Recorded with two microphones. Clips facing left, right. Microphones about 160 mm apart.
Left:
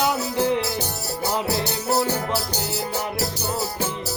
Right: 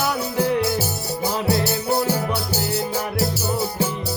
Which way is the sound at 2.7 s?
Centre (ahead or behind).